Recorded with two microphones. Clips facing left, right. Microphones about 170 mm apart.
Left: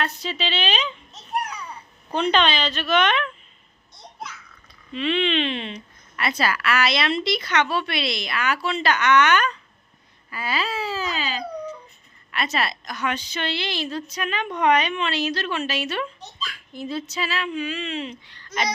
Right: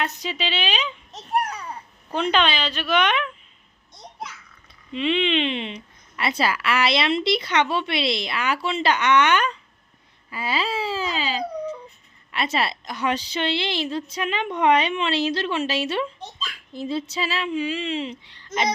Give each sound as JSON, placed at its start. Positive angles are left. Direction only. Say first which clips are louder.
{"t": 0.0, "sound": "speech", "louder": "even", "side_deg": -15}
{"t": 1.4, "sound": "babbling", "louder": "right 3 dB", "side_deg": -45}
{"t": 2.3, "sound": "speech", "louder": "even", "side_deg": -10}
{"t": 4.9, "sound": "a woman's voice", "louder": "right 1 dB", "side_deg": -20}